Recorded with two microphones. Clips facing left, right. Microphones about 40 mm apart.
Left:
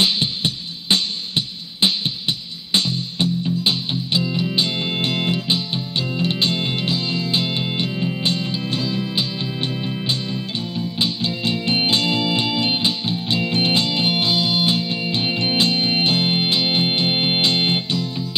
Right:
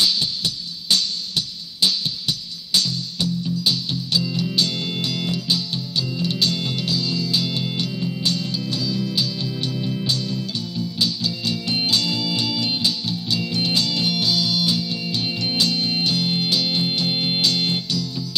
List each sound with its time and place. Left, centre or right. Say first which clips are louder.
0.0 s music: left 2 dB; left